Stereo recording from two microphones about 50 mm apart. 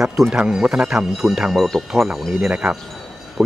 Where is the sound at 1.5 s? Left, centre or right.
Centre.